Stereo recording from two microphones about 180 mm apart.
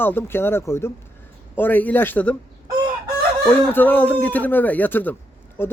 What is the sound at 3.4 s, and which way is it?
Speech, 10° left (ahead or behind).